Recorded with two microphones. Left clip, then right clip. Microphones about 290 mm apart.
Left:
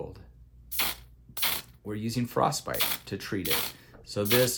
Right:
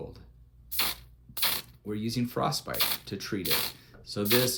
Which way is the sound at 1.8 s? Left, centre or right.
Left.